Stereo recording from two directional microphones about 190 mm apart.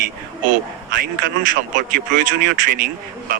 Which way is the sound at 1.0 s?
45° right (ahead or behind).